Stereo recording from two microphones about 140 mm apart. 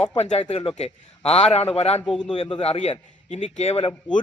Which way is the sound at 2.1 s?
5° left (ahead or behind).